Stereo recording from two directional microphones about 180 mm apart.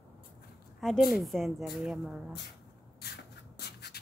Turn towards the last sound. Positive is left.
turn(degrees=65)  # may be behind; listen again after turning